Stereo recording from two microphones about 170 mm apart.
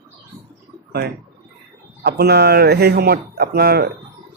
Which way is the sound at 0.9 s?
70° right (ahead or behind).